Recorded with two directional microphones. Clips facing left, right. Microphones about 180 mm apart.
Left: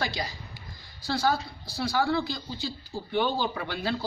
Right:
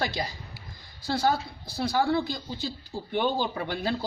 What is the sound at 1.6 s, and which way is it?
Speech, 20° right (ahead or behind).